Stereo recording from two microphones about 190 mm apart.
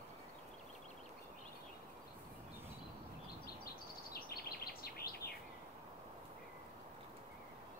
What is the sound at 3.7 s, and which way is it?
Bird, 55° left (ahead or behind).